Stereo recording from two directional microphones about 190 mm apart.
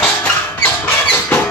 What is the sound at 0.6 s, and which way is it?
Rodents, 5° left (ahead or behind).